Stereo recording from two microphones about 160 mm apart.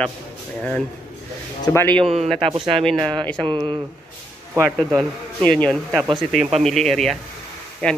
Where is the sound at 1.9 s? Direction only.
40° right (ahead or behind).